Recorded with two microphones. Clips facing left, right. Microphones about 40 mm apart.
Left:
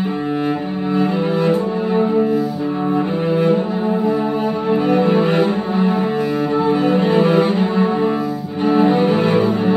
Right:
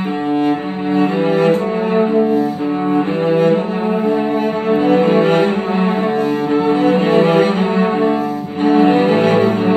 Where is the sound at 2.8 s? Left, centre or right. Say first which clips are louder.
Right 3 dB; right.